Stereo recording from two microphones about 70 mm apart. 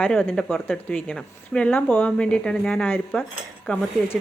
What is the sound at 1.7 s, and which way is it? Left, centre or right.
Speech, left.